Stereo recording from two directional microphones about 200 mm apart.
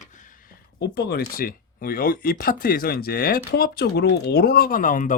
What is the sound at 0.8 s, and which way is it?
Speech, 55° left (ahead or behind).